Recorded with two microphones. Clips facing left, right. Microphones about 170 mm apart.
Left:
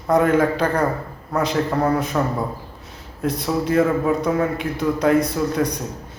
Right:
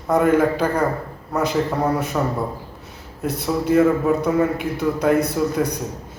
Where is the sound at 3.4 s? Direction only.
5° right (ahead or behind).